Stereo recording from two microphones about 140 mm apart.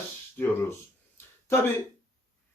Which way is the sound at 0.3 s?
10° left (ahead or behind).